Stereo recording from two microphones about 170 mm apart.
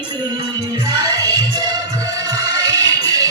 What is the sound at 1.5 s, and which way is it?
Music, 25° right (ahead or behind).